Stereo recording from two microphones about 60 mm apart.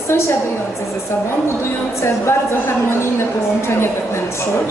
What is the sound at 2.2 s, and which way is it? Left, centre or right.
Speech, left.